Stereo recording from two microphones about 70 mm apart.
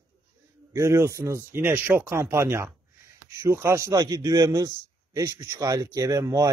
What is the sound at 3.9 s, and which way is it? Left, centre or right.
A man's voice, right.